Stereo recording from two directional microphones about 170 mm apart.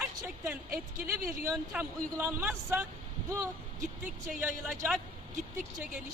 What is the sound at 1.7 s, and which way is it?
A man's voice, 15° right (ahead or behind).